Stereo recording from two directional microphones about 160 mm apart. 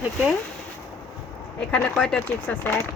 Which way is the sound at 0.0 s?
5° right (ahead or behind).